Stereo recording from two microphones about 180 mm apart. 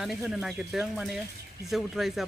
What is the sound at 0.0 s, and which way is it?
Speech, centre (ahead or behind).